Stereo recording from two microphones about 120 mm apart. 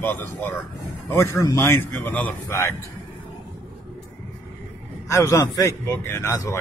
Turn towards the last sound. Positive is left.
turn(degrees=25)  # may be behind; listen again after turning